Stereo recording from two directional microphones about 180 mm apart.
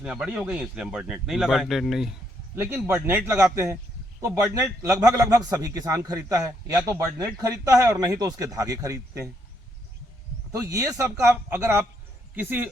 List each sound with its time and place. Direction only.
0.0 s speech: 5° right (ahead or behind)
2.6 s a man's voice: 15° right (ahead or behind)
10.5 s a man's voice: 20° right (ahead or behind)